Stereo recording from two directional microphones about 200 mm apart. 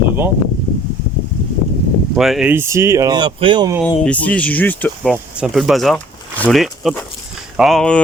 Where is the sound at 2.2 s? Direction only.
Centre (ahead or behind); by 3.7 s 25° right (ahead or behind).